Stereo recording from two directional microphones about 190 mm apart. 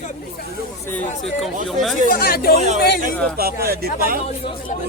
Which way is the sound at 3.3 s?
55° right (ahead or behind).